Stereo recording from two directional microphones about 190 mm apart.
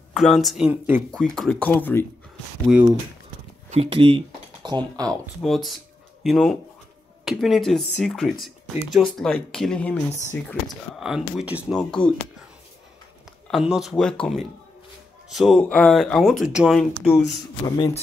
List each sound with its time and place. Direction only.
0.1 s speech: centre (ahead or behind)
1.1 s speech: centre (ahead or behind)
2.6 s speech: 10° right (ahead or behind)
3.7 s speech: 30° right (ahead or behind)
5.2 s speech: centre (ahead or behind)
11.0 s speech: centre (ahead or behind)
13.5 s speech: centre (ahead or behind)
17.6 s a man's voice: 20° left (ahead or behind)